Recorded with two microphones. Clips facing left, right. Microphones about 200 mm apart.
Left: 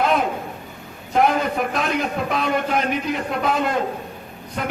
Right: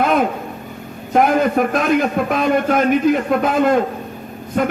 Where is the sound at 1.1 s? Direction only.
50° right (ahead or behind).